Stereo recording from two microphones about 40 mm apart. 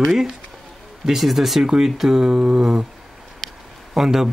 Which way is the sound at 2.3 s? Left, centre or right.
Right.